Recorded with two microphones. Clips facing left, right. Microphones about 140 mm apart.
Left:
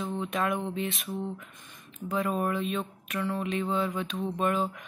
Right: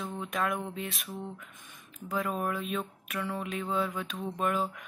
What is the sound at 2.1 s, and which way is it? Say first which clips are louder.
Speech: left 3 dB; centre (ahead or behind).